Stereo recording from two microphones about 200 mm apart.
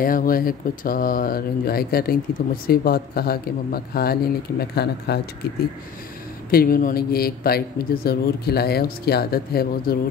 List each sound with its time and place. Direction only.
0.0 s speech: 45° left (ahead or behind)
6.5 s speech: 50° left (ahead or behind)